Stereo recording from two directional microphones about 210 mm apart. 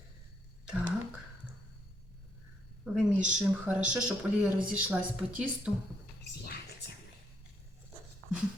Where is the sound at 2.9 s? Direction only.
5° right (ahead or behind).